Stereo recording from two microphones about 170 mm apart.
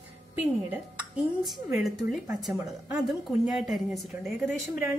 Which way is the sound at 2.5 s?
20° right (ahead or behind).